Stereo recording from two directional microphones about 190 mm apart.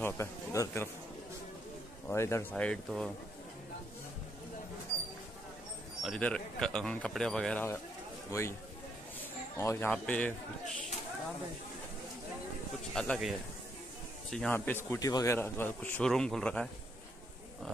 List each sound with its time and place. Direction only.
0.0 s speech: 15° left (ahead or behind)
2.0 s speech: 15° left (ahead or behind)
6.0 s speech: 5° left (ahead or behind)
9.6 s speech: 15° left (ahead or behind)
12.9 s speech: 5° left (ahead or behind)
14.3 s speech: 5° left (ahead or behind)